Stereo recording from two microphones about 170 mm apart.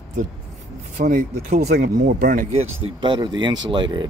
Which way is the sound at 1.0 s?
50° right (ahead or behind).